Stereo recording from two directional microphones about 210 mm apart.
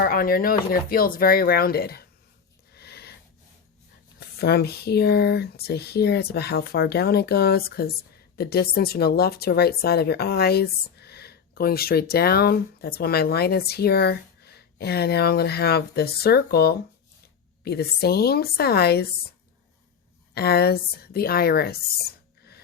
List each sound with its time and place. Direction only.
0.0 s speech: 45° left (ahead or behind)
2.7 s a sound: 50° left (ahead or behind)
4.2 s speech: 50° left (ahead or behind)
20.3 s speech: 50° left (ahead or behind)